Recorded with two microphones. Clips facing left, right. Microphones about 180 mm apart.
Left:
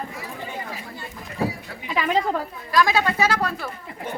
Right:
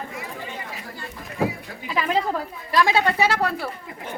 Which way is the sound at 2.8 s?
25° right (ahead or behind).